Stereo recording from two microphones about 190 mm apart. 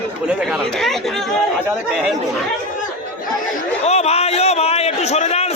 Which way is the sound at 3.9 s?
35° left (ahead or behind).